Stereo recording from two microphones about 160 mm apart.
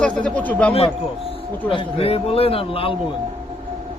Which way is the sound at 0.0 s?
5° left (ahead or behind).